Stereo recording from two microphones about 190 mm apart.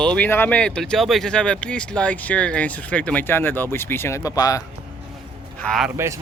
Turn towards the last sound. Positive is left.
turn(degrees=0)  # may be behind; listen again after turning